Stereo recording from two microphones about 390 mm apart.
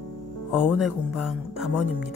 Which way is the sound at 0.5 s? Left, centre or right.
Centre.